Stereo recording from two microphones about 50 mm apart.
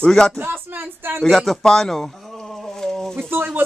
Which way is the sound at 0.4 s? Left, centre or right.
Right.